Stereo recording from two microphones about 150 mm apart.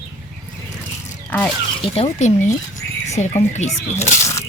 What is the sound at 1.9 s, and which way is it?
Speech, 45° left (ahead or behind).